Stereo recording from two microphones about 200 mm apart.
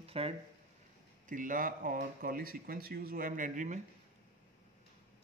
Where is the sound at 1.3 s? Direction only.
40° right (ahead or behind).